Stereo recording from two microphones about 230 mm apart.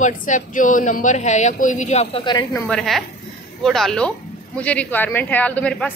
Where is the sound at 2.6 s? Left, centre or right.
Centre.